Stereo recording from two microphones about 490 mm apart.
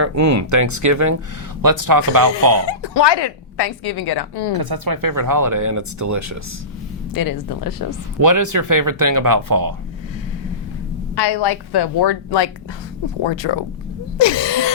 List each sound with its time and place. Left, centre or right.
0.0 s speech: right
2.6 s a woman's voice: left
4.5 s speech: right
7.1 s speech: left
8.2 s speech: right
11.1 s a woman's voice: left
13.2 s speech: left
14.2 s a sound: left